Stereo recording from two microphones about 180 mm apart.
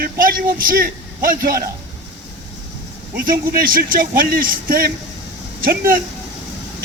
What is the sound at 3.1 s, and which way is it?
Speech, 55° right (ahead or behind).